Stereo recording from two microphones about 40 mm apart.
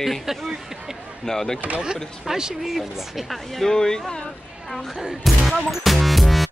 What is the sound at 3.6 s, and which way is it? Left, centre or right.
Speech, centre.